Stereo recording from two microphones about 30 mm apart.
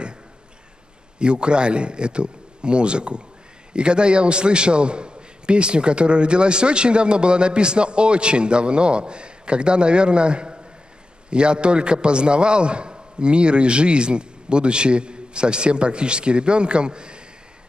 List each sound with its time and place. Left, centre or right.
1.2 s a man's voice: right